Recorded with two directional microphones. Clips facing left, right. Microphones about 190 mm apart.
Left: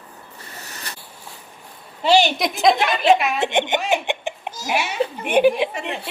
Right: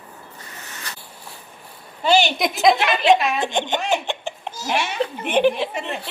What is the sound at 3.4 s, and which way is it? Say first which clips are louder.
A woman's voice: left 2 dB; 20° left (ahead or behind).